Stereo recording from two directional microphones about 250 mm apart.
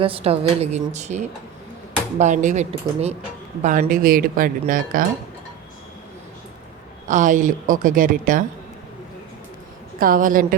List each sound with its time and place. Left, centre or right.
0.0 s a woman's voice: right
7.1 s speech: right
10.0 s speech: right